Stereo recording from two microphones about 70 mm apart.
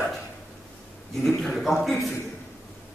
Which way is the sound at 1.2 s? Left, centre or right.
Centre.